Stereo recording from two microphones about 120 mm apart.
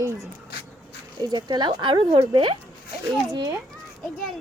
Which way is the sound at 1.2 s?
40° right (ahead or behind).